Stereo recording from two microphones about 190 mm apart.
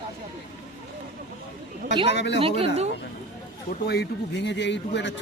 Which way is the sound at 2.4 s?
30° right (ahead or behind).